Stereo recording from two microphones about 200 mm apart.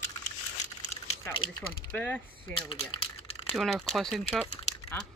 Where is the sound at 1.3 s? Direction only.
25° left (ahead or behind).